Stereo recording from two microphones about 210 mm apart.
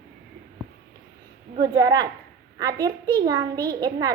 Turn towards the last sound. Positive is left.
turn(degrees=-20)  # may be behind; listen again after turning